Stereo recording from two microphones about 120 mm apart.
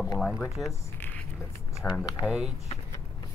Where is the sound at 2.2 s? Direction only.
10° right (ahead or behind).